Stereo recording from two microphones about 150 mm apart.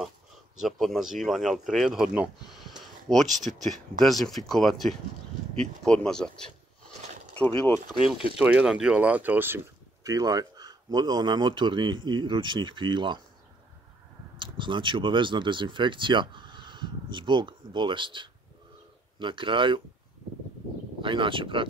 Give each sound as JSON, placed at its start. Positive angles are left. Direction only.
{"t": 0.6, "sound": "speech", "side_deg": 0}
{"t": 3.4, "sound": "speech", "side_deg": -55}
{"t": 4.0, "sound": "speech", "side_deg": 0}
{"t": 8.4, "sound": "speech", "side_deg": -10}
{"t": 10.0, "sound": "speech", "side_deg": -25}
{"t": 14.4, "sound": "speech", "side_deg": -35}
{"t": 21.0, "sound": "speech", "side_deg": -35}